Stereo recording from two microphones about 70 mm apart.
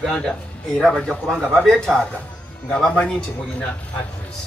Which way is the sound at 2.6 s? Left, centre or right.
Centre.